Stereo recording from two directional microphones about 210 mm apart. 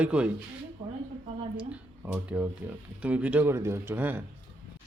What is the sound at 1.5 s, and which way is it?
Speech, 5° right (ahead or behind).